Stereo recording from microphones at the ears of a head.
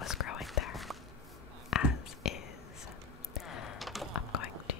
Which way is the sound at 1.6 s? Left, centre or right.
Left.